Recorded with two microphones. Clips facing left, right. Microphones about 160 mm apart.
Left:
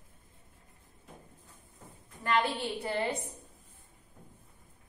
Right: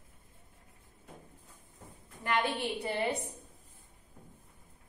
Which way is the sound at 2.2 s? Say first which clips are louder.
Left 2 dB; 15° right (ahead or behind).